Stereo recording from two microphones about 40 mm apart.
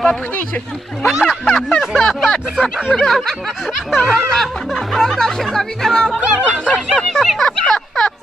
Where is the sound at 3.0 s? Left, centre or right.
Centre.